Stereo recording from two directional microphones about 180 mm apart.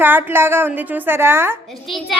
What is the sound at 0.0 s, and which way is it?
A woman's voice, 10° right (ahead or behind).